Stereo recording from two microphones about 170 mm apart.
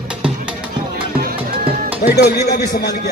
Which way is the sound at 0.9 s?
60° right (ahead or behind).